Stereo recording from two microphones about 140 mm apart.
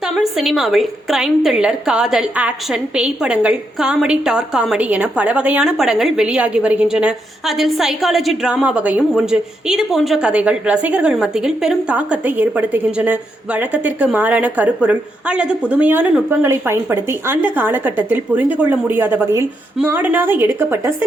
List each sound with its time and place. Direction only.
0.1 s a woman's voice: centre (ahead or behind)